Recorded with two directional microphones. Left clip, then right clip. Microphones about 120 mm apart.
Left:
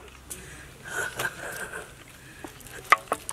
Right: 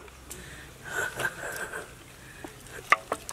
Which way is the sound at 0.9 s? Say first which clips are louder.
Even; 15° right (ahead or behind).